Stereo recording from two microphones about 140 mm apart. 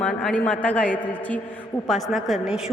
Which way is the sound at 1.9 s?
Centre (ahead or behind).